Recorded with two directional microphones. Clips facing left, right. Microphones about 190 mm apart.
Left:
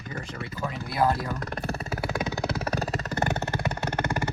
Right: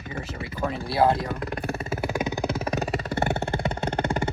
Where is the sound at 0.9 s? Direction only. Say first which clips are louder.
Right 3 dB; 25° right (ahead or behind).